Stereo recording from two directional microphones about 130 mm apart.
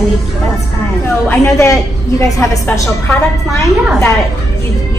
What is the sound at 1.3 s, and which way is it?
Speech, 20° left (ahead or behind).